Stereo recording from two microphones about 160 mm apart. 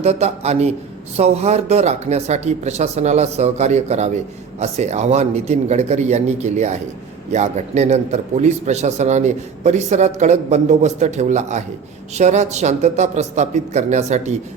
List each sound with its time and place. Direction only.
0.0 s speech: 45° right (ahead or behind)